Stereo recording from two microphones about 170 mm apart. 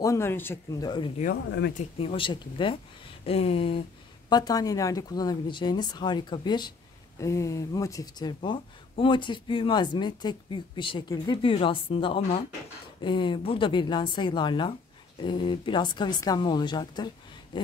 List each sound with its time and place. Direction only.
0.0 s speech: 15° left (ahead or behind)
0.8 s speech: 30° left (ahead or behind)
1.2 s speech: 75° left (ahead or behind)
1.8 s speech: 35° left (ahead or behind)
4.3 s speech: 25° left (ahead or behind)